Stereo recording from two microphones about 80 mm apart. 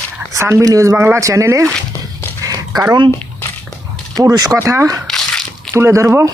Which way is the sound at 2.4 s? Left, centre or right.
Right.